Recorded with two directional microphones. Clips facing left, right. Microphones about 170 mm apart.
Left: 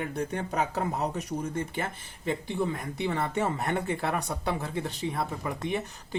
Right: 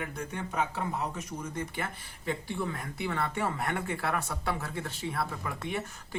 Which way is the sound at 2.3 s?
20° left (ahead or behind).